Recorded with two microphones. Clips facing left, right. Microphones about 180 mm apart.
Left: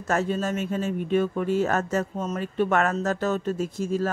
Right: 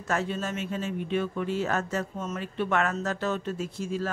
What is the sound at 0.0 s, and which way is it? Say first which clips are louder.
Speech: left 4 dB; 45° left (ahead or behind).